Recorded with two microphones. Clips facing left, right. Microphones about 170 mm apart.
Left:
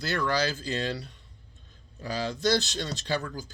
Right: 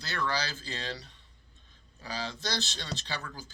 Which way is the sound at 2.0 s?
50° left (ahead or behind).